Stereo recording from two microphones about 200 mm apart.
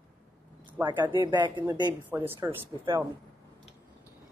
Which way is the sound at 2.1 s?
10° right (ahead or behind).